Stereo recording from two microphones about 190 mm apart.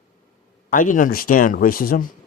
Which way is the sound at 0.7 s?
45° left (ahead or behind).